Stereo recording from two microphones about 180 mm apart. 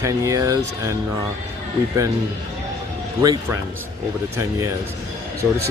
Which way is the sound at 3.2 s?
20° right (ahead or behind).